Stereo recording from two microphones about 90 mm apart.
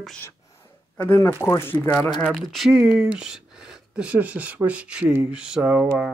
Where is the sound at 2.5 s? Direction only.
5° right (ahead or behind).